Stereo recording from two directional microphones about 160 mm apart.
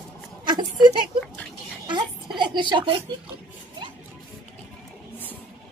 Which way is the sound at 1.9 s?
30° right (ahead or behind).